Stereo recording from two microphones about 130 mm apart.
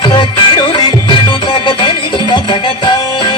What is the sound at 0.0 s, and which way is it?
Music, 40° left (ahead or behind).